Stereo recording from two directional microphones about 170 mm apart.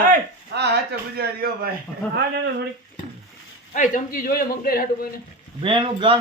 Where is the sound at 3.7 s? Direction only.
50° left (ahead or behind).